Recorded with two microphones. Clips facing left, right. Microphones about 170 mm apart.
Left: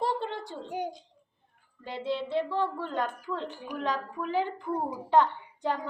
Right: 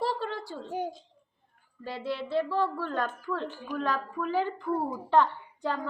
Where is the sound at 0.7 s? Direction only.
15° left (ahead or behind).